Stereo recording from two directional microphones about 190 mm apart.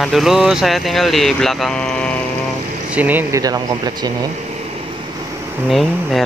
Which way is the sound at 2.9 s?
10° right (ahead or behind).